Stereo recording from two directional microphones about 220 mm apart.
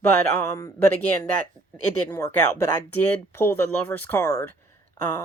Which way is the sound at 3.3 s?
10° left (ahead or behind).